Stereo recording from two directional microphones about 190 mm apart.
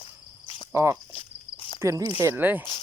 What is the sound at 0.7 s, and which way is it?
Cricket, 15° right (ahead or behind).